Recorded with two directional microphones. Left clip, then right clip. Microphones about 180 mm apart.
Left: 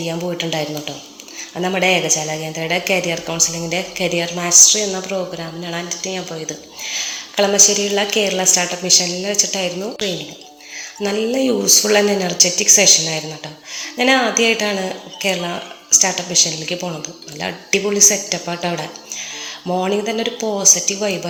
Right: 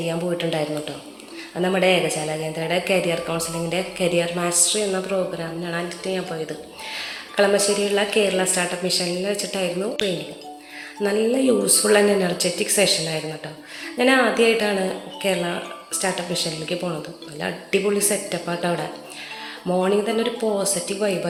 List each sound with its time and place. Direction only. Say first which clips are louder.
0.0 s a woman's voice: left 2 dB; 35° left (ahead or behind)
11.0 s a woman's voice: left 1 dB; 35° left (ahead or behind)